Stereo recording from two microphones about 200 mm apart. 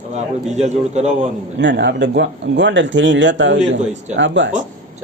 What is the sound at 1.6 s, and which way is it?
A man's voice, 60° right (ahead or behind).